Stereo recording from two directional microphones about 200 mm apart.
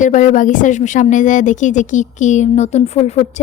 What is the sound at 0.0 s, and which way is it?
A woman's voice, 40° left (ahead or behind).